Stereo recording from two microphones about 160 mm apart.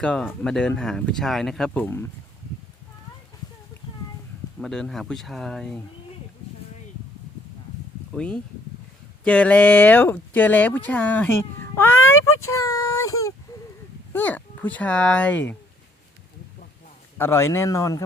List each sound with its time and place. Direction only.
0.0 s speech: 5° left (ahead or behind)
4.6 s speech: centre (ahead or behind)
8.1 s speech: 5° left (ahead or behind)
17.2 s speech: 15° left (ahead or behind)